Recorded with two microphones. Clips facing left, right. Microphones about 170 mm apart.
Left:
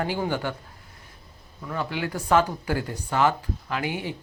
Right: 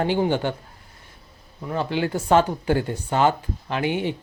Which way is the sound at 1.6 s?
25° right (ahead or behind).